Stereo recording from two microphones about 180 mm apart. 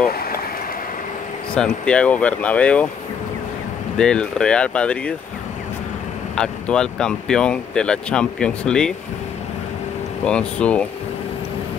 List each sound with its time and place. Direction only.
0.0 s stream: 55° left (ahead or behind)
1.5 s speech: 5° left (ahead or behind)
4.0 s speech: 5° left (ahead or behind)
6.3 s speech: 5° left (ahead or behind)
10.2 s speech: 5° left (ahead or behind)